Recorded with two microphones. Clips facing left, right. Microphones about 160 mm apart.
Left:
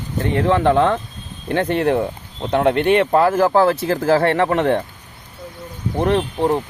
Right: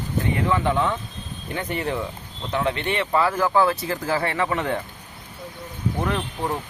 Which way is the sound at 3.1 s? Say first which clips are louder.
Left 7 dB; 45° left (ahead or behind).